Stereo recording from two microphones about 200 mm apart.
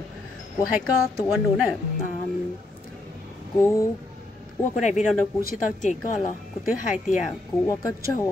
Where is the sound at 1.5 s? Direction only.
Centre (ahead or behind).